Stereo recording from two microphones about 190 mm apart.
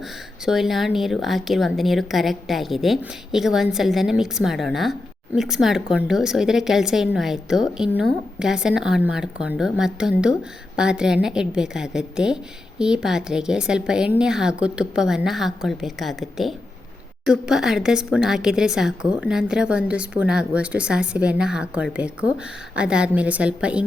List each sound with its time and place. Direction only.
0.4 s a woman's voice: centre (ahead or behind)